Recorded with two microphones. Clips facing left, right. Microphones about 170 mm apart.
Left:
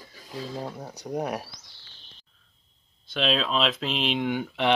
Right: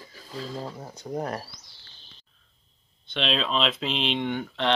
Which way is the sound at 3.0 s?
Centre (ahead or behind).